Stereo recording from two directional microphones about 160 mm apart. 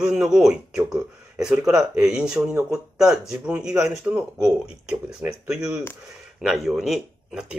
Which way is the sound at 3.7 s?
15° right (ahead or behind).